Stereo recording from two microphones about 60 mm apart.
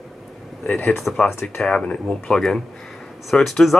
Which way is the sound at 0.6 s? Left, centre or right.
Left.